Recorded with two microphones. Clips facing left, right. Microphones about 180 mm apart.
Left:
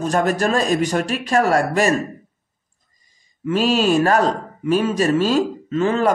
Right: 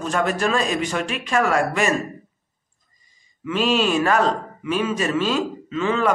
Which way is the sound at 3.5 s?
40° left (ahead or behind).